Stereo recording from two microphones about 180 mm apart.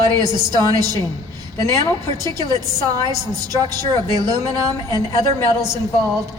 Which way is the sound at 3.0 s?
20° right (ahead or behind).